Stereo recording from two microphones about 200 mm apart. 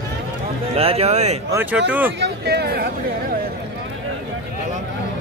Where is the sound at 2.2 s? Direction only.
55° right (ahead or behind).